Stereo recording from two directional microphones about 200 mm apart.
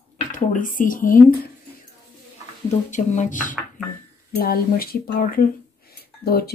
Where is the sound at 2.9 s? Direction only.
40° left (ahead or behind).